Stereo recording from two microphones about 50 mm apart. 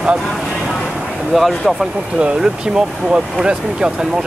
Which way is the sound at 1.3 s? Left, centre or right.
Centre.